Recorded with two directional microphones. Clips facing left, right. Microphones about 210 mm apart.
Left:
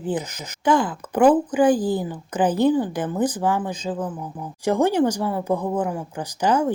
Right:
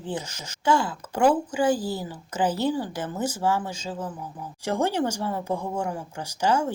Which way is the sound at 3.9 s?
45° left (ahead or behind).